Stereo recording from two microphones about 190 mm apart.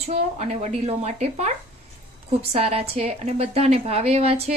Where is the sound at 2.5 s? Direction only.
30° right (ahead or behind).